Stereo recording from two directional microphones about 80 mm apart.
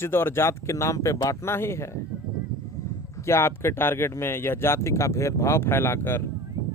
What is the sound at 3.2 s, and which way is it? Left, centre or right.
Speech, left.